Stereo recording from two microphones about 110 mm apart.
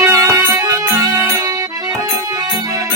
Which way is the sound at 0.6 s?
30° right (ahead or behind).